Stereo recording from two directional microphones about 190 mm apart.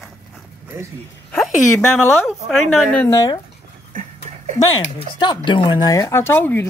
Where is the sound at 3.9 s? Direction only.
40° right (ahead or behind).